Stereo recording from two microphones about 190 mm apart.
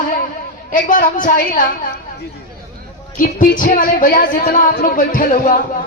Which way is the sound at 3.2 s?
45° left (ahead or behind).